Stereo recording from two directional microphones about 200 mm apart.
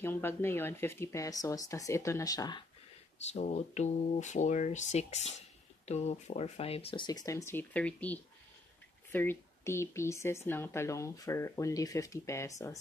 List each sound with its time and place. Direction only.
0.0 s speech: 10° left (ahead or behind)
3.2 s speech: 35° left (ahead or behind); by 12.7 s 15° left (ahead or behind)